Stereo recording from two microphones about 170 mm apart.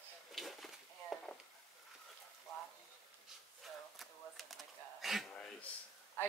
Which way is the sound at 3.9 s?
Centre (ahead or behind).